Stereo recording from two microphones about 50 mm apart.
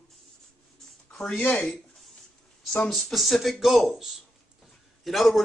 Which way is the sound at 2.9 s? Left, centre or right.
Centre.